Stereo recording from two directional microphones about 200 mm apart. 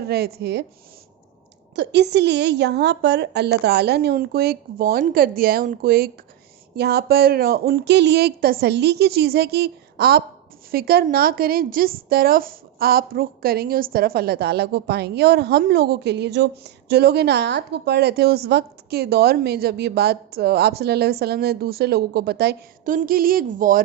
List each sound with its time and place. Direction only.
0.1 s a woman's voice: 50° right (ahead or behind)
1.7 s a woman's voice: 60° right (ahead or behind); by 23.8 s 40° right (ahead or behind)